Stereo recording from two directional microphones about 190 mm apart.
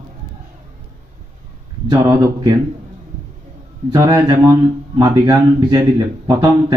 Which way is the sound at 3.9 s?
20° right (ahead or behind).